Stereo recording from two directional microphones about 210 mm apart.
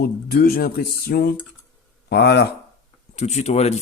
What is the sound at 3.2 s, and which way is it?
Speech, 30° left (ahead or behind).